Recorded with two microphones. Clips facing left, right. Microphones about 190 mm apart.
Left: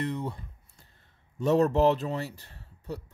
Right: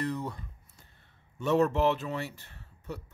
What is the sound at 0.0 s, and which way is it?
Speech, 25° left (ahead or behind).